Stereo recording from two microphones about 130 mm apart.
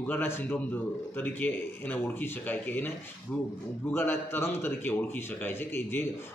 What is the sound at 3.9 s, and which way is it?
Speech, 15° left (ahead or behind).